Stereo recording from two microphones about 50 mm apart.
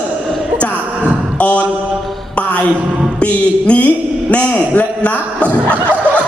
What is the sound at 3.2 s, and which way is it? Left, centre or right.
A man's voice, left.